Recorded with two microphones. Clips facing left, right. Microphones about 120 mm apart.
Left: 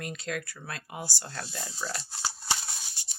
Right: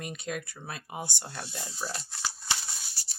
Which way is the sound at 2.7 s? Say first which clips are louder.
Left 1 dB; 20° left (ahead or behind).